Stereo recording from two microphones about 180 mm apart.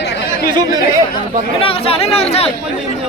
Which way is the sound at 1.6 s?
30° left (ahead or behind).